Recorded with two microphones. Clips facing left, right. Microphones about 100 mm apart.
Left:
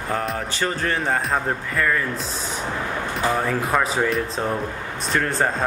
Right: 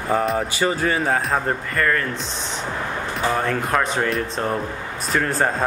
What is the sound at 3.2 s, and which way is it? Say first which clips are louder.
Speech: right 1 dB; centre (ahead or behind).